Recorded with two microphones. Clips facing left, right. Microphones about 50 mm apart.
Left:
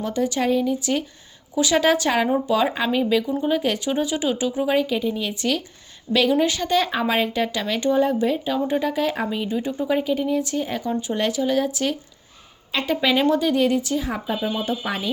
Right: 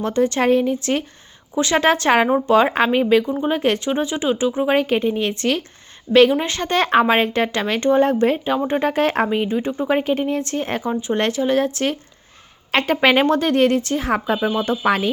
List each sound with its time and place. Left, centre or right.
0.0 s speech: right
8.4 s speech: right
8.9 s speech: right
9.3 s speech: right
12.7 s speech: right
14.0 s speech: right
14.5 s speech: right